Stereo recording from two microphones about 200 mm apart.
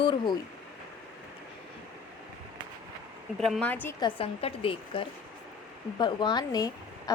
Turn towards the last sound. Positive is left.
turn(degrees=20)  # may be behind; listen again after turning